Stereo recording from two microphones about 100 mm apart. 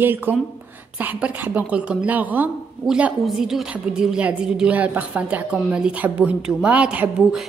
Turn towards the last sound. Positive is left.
turn(degrees=-10)  # may be behind; listen again after turning